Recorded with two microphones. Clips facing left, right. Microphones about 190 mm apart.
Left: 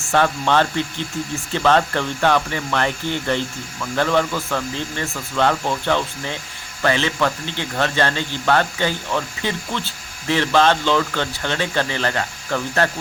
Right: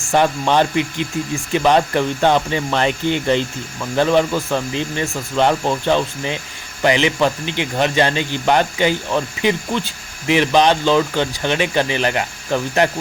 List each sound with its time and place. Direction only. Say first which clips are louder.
0.1 s speech: right 2 dB; 15° right (ahead or behind)